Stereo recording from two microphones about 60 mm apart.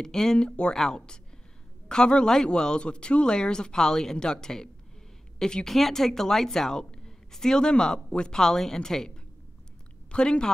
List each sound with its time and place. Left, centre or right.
0.0 s speech: centre